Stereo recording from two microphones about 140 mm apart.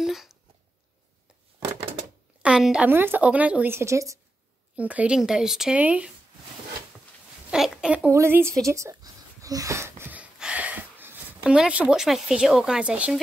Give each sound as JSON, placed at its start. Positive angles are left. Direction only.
{"t": 0.0, "sound": "a sound", "side_deg": 0}
{"t": 2.4, "sound": "a woman's voice", "side_deg": -5}
{"t": 4.7, "sound": "speech", "side_deg": -10}
{"t": 7.5, "sound": "speech", "side_deg": -5}
{"t": 8.1, "sound": "a woman's voice", "side_deg": -20}
{"t": 8.6, "sound": "a sound", "side_deg": -20}